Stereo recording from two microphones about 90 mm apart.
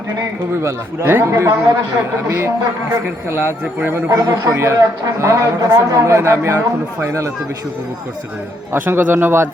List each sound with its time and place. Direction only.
0.6 s a man's voice: 30° right (ahead or behind)
3.2 s a man's voice: 25° right (ahead or behind)
3.6 s a man's voice: 15° right (ahead or behind)
3.9 s a man's voice: 35° right (ahead or behind)
8.7 s a man's voice: 25° right (ahead or behind)